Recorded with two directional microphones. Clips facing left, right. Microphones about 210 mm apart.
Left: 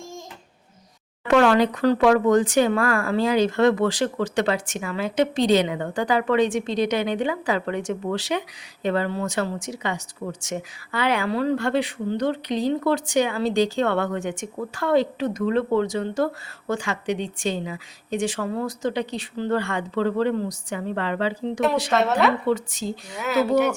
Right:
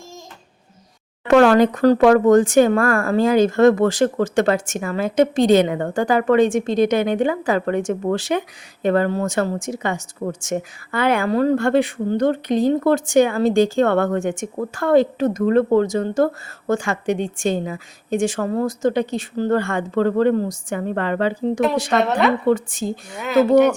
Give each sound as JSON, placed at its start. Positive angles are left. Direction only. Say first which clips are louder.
{"t": 1.3, "sound": "speech", "louder": "right 5 dB", "side_deg": -45}
{"t": 21.9, "sound": "speech", "louder": "right 2 dB", "side_deg": 0}
{"t": 22.4, "sound": "speech", "louder": "right 5 dB", "side_deg": -50}
{"t": 23.1, "sound": "speech", "louder": "right 4 dB", "side_deg": 5}